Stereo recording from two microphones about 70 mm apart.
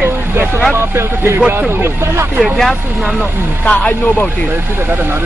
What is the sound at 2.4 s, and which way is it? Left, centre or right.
Speech, centre.